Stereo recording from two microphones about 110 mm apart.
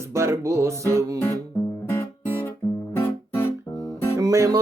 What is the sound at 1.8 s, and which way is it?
Guitar, 20° left (ahead or behind).